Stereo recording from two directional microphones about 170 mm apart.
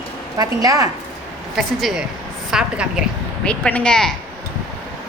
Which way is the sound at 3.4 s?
5° left (ahead or behind).